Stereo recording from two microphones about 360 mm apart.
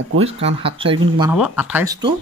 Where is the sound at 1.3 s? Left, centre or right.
Centre.